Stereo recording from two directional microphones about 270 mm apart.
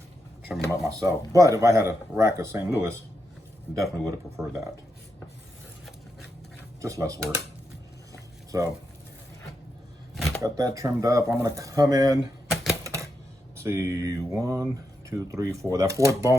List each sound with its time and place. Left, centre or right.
0.5 s speech: centre
0.9 s speech: centre
6.8 s speech: centre
8.1 s a sound: centre
10.2 s shuffling cards: centre
10.4 s speech: centre
12.8 s typewriter: centre
13.6 s speech: centre